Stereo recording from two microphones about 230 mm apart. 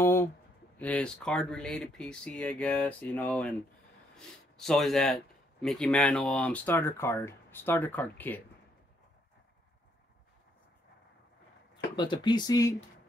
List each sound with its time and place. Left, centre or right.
0.0 s speech: centre
11.9 s speech: centre